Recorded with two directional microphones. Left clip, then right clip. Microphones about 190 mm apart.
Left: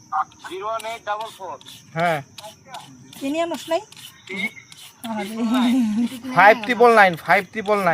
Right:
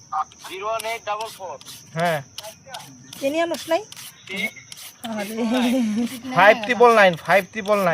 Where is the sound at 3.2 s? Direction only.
60° right (ahead or behind).